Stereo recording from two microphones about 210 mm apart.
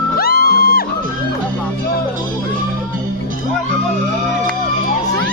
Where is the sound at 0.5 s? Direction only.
45° left (ahead or behind).